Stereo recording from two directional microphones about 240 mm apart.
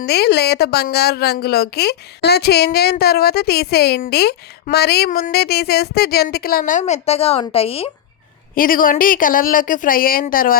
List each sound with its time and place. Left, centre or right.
0.0 s a woman's voice: left
8.5 s a woman's voice: left